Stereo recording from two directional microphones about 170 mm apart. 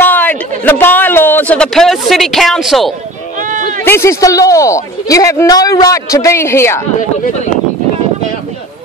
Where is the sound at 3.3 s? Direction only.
50° right (ahead or behind).